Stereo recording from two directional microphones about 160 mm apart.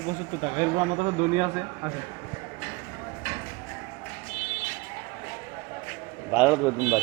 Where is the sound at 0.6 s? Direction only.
30° right (ahead or behind).